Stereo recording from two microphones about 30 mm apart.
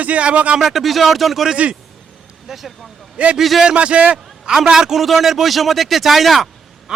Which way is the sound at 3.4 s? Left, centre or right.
Centre.